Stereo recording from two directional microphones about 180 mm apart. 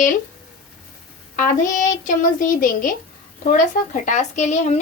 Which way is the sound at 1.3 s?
45° left (ahead or behind).